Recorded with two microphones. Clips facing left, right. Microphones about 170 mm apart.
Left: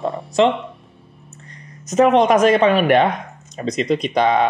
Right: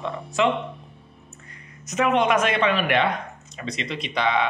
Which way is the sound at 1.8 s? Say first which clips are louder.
Left 7 dB; 40° left (ahead or behind).